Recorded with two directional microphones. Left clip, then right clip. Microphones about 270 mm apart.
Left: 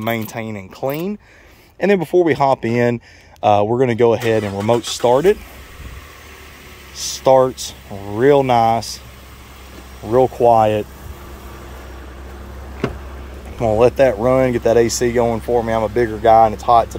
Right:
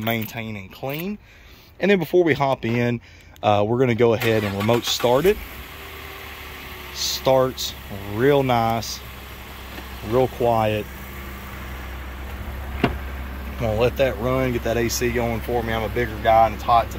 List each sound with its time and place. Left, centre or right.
0.0 s speech: centre
7.0 s speech: centre
10.1 s speech: centre
13.6 s speech: centre